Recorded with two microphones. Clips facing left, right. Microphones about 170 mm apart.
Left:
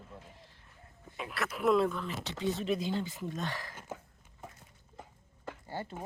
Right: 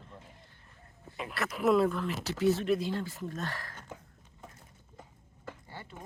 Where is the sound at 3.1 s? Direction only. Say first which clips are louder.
Even; 15° left (ahead or behind).